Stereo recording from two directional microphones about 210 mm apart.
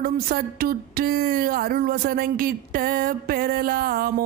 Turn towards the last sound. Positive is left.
turn(degrees=-45)  # may be behind; listen again after turning